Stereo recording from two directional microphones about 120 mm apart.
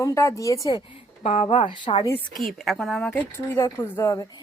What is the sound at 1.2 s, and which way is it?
Speech, 70° left (ahead or behind).